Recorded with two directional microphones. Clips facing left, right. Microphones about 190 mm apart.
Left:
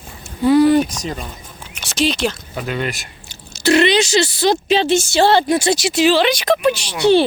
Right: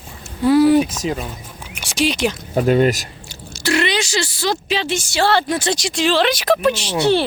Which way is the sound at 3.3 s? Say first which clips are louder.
Left 5 dB; 20° left (ahead or behind).